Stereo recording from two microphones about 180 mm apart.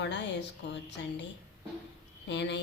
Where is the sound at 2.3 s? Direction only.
75° left (ahead or behind).